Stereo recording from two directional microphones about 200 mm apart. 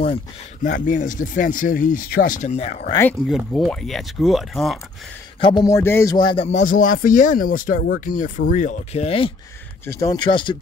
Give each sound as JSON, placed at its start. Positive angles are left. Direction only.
{"t": 0.7, "sound": "speech", "side_deg": 40}
{"t": 2.9, "sound": "speech", "side_deg": 10}
{"t": 3.3, "sound": "speech", "side_deg": 0}
{"t": 5.4, "sound": "speech", "side_deg": 20}
{"t": 9.8, "sound": "speech", "side_deg": 15}